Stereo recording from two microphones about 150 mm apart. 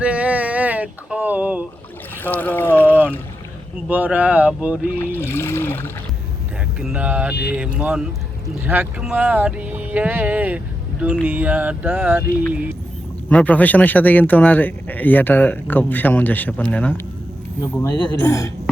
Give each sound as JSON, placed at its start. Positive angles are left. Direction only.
{"t": 0.0, "sound": "a sound", "side_deg": -10}
{"t": 2.2, "sound": "speech", "side_deg": 10}
{"t": 3.8, "sound": "speech", "side_deg": -10}
{"t": 5.1, "sound": "speech", "side_deg": 15}
{"t": 6.7, "sound": "speech", "side_deg": -5}
{"t": 13.3, "sound": "speech", "side_deg": 10}